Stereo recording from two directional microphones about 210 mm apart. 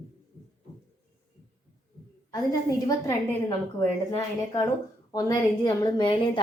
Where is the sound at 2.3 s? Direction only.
15° left (ahead or behind).